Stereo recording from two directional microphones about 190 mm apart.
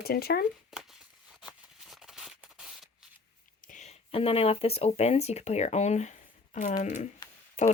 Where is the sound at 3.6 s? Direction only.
40° left (ahead or behind).